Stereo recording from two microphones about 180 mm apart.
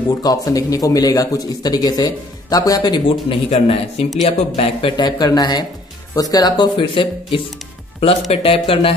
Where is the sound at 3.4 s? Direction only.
35° left (ahead or behind).